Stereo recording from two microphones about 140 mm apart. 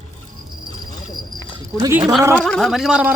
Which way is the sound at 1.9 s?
5° right (ahead or behind).